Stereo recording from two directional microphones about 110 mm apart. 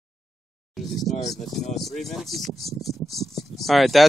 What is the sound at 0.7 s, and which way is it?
Speech, centre (ahead or behind).